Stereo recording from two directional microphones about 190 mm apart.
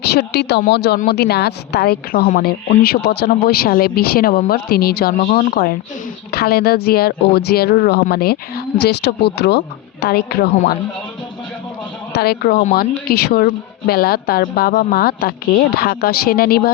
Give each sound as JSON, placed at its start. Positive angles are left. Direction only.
{"t": 0.0, "sound": "a woman's voice", "side_deg": 60}
{"t": 12.1, "sound": "a woman's voice", "side_deg": 55}